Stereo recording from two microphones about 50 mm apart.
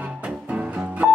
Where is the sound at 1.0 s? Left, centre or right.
Centre.